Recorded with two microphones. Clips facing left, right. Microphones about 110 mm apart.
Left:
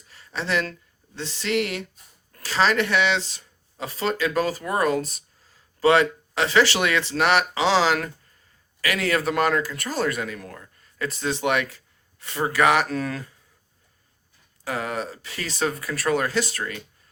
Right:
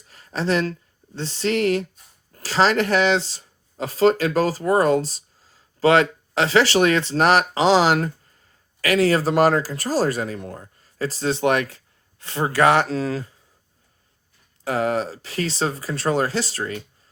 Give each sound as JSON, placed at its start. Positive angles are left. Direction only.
{"t": 0.1, "sound": "speech", "side_deg": -40}
{"t": 14.6, "sound": "speech", "side_deg": -35}